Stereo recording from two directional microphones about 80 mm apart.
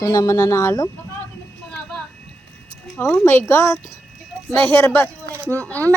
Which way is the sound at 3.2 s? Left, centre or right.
Left.